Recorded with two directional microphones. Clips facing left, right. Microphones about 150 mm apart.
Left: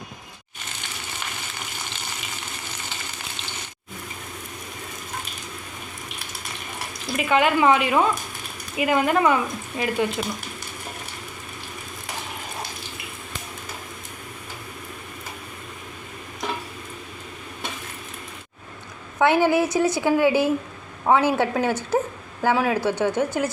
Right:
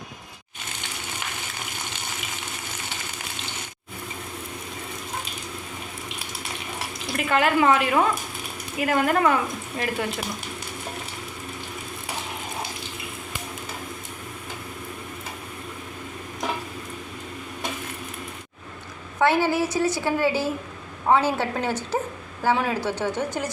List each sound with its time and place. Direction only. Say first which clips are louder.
7.2 s speech: left 1 dB; centre (ahead or behind)
19.2 s speech: left 3 dB; 15° left (ahead or behind)